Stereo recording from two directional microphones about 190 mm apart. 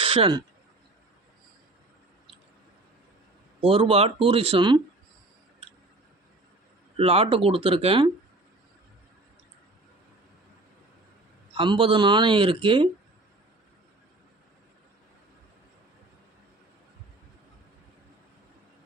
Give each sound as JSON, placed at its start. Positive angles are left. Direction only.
{"t": 0.0, "sound": "speech", "side_deg": -25}
{"t": 3.6, "sound": "speech", "side_deg": -30}
{"t": 6.9, "sound": "speech", "side_deg": -30}
{"t": 11.5, "sound": "speech", "side_deg": -30}